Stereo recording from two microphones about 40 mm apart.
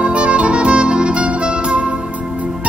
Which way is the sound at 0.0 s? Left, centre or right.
Right.